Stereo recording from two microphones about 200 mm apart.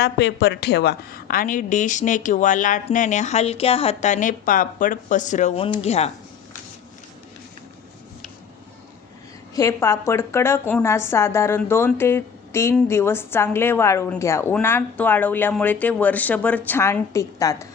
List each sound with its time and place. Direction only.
0.0 s a woman's voice: 55° left (ahead or behind); by 6.1 s 30° left (ahead or behind)
9.6 s a woman's voice: 15° left (ahead or behind)